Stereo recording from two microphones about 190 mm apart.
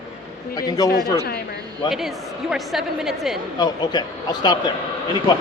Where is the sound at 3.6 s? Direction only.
20° left (ahead or behind).